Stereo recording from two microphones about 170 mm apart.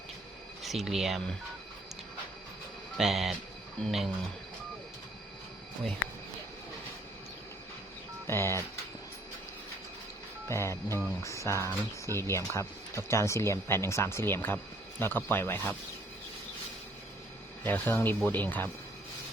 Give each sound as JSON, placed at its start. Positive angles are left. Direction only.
{"t": 0.6, "sound": "speech", "side_deg": 0}
{"t": 3.0, "sound": "speech", "side_deg": 0}
{"t": 8.3, "sound": "speech", "side_deg": 15}
{"t": 10.5, "sound": "speech", "side_deg": 15}
{"t": 11.7, "sound": "speech", "side_deg": -20}
{"t": 12.3, "sound": "speech", "side_deg": 15}
{"t": 17.6, "sound": "speech", "side_deg": 10}